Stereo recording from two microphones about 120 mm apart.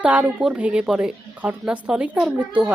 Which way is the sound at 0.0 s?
10° right (ahead or behind).